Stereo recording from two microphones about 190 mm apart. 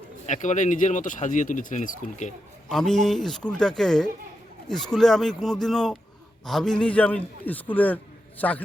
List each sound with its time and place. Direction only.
0.3 s speech: 40° left (ahead or behind)
2.6 s a man's voice: 5° left (ahead or behind)